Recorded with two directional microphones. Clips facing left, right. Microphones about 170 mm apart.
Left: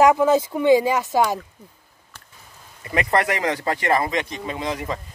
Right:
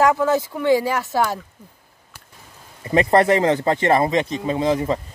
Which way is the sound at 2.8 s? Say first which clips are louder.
Right 6 dB; 30° right (ahead or behind).